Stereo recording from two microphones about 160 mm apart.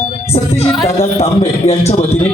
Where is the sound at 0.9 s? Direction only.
40° left (ahead or behind).